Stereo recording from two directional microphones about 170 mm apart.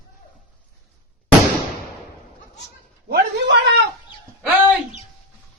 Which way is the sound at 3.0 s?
80° right.